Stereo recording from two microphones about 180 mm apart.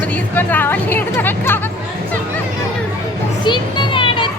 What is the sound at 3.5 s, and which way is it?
Children playing, 25° left (ahead or behind).